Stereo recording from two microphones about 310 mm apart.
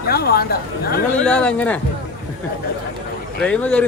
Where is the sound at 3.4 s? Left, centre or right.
Centre.